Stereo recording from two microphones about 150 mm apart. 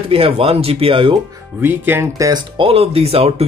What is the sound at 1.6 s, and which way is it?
Speech, 15° right (ahead or behind).